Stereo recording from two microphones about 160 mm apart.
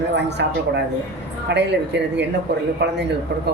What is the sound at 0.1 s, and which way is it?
Speech, 90° right.